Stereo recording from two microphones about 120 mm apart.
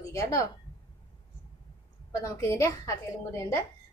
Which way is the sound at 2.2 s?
25° left (ahead or behind).